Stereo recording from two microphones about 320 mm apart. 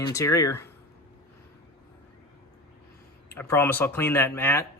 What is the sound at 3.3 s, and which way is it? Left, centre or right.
Speech, centre.